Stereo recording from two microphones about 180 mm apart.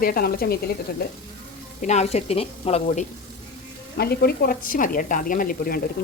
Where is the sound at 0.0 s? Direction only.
55° left (ahead or behind).